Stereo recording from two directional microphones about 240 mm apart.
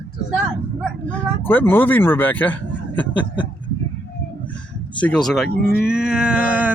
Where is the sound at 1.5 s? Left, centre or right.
Centre.